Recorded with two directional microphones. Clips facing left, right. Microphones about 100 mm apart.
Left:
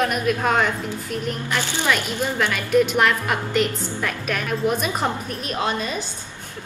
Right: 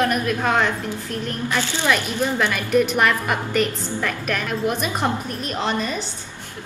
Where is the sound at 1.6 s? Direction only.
15° left (ahead or behind).